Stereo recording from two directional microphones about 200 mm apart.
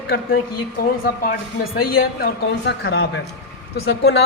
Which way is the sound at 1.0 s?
50° left (ahead or behind).